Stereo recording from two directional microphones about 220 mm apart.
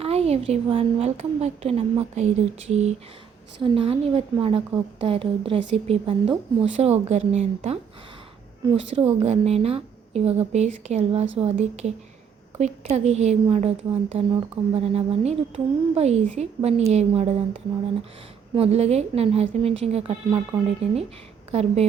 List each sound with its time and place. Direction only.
0.0 s a woman's voice: 30° right (ahead or behind)
9.0 s a woman's voice: 25° right (ahead or behind)
18.5 s a woman's voice: 25° right (ahead or behind)
21.5 s a woman's voice: 25° right (ahead or behind)